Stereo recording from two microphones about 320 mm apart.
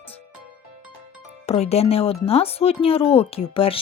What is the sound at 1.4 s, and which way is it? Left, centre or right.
Speech, centre.